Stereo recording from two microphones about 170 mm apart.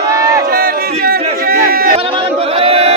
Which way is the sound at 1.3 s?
60° right (ahead or behind).